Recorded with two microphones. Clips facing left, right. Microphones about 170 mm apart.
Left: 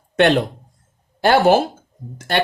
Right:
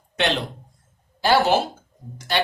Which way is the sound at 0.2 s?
55° left (ahead or behind).